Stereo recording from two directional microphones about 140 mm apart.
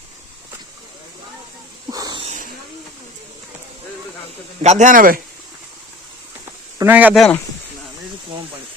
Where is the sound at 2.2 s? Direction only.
70° right (ahead or behind).